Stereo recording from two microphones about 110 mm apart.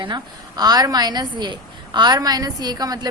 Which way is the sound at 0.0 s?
40° right (ahead or behind).